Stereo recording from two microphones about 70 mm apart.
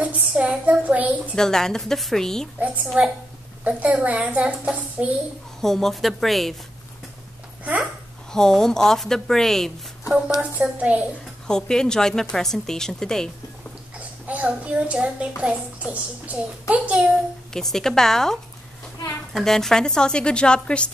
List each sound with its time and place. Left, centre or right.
0.0 s a child's voice: centre
1.3 s a woman's voice: centre
3.6 s a child's voice: right
5.6 s a woman's voice: centre
8.3 s a woman's voice: centre
10.4 s a woman's voice: centre
11.4 s a woman's voice: centre
13.9 s a child's voice: right
17.5 s a woman's voice: centre